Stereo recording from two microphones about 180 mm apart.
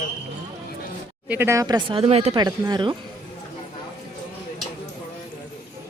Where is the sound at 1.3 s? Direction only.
10° right (ahead or behind); by 2.4 s 35° right (ahead or behind).